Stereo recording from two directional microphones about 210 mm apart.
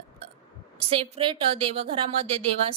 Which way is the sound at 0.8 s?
25° right (ahead or behind).